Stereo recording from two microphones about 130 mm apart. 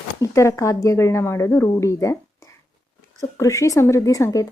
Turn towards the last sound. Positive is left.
turn(degrees=25)  # may be behind; listen again after turning